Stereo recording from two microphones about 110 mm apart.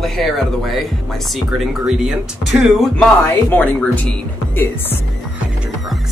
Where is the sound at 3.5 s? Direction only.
10° left (ahead or behind).